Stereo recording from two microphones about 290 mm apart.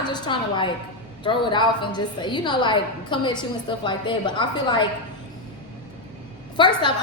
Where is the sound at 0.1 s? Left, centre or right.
Centre.